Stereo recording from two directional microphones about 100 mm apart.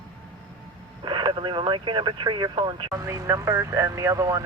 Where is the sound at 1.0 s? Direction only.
50° right (ahead or behind).